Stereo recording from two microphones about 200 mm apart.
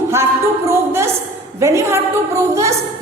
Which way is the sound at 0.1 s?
10° right (ahead or behind).